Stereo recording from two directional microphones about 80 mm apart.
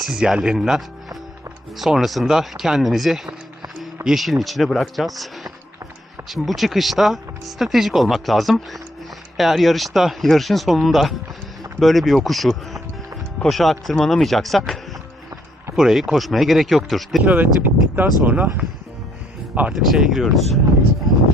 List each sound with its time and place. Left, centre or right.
0.0 s speech: centre
17.3 s speech: right
19.7 s speech: centre